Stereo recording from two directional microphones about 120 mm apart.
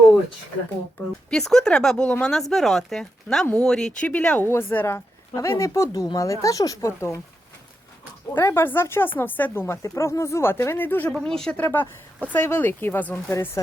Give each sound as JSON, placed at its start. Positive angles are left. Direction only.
{"t": 1.3, "sound": "speech", "side_deg": 5}
{"t": 8.3, "sound": "speech", "side_deg": 20}
{"t": 11.2, "sound": "speech", "side_deg": 5}
{"t": 11.6, "sound": "speech", "side_deg": 15}